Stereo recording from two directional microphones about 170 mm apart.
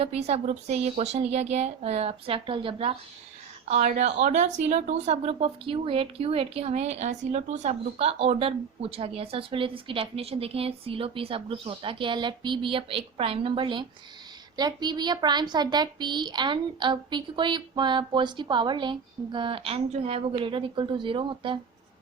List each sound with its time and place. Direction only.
0.0 s speech: 35° right (ahead or behind)
3.8 s a child's voice: 45° right (ahead or behind); by 21.6 s 30° right (ahead or behind)